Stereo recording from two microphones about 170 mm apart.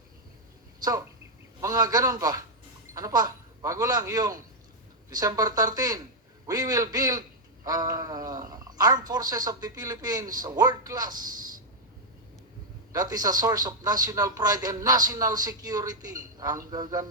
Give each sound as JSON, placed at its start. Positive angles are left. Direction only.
{"t": 0.8, "sound": "a man's voice", "side_deg": -20}
{"t": 12.9, "sound": "a man's voice", "side_deg": -20}